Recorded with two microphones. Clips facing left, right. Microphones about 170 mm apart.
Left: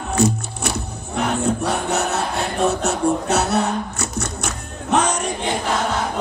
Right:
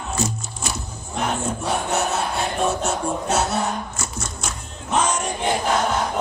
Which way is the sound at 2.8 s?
65° left (ahead or behind).